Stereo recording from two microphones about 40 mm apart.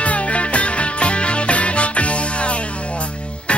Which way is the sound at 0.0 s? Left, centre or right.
Left.